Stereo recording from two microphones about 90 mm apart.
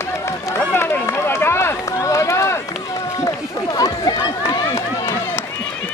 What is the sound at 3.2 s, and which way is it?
Run, 45° left (ahead or behind).